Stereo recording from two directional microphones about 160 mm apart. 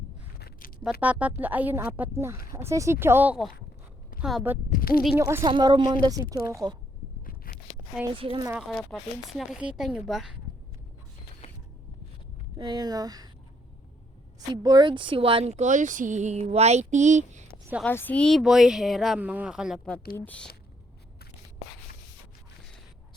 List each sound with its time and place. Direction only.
0.3 s a sound: 75° left (ahead or behind)
1.0 s a woman's voice: 10° right (ahead or behind)
4.7 s speech: 65° left (ahead or behind)
5.1 s a woman's voice: 15° right (ahead or behind)
5.4 s speech: 25° right (ahead or behind)
7.3 s scrape: 65° left (ahead or behind)
8.1 s speech: 35° right (ahead or behind)
8.4 s a woman's voice: 5° right (ahead or behind)
8.7 s speech: 5° left (ahead or behind)
11.4 s a sound: 40° left (ahead or behind)
12.5 s speech: 25° right (ahead or behind)
14.3 s speech: 25° right (ahead or behind); by 17.4 s 50° right (ahead or behind)
17.8 s speech: 10° left (ahead or behind)
20.1 s speech: 10° left (ahead or behind)